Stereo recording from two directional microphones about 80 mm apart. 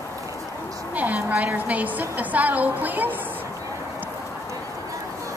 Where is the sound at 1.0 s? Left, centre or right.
Centre.